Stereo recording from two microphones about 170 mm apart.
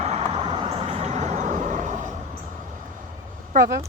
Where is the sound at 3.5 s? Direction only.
55° right (ahead or behind).